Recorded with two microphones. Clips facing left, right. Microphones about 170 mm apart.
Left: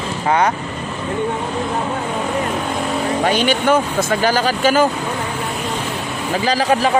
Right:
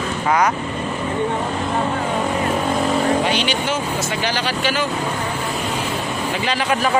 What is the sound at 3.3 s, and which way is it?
Speech, 50° left (ahead or behind).